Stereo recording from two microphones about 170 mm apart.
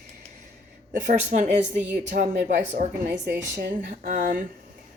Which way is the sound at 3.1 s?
90° right.